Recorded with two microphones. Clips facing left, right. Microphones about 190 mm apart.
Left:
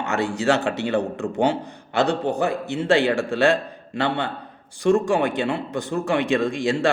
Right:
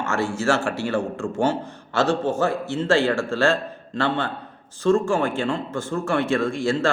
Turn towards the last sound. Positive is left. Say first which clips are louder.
# even
turn(degrees=15)  # may be behind; listen again after turning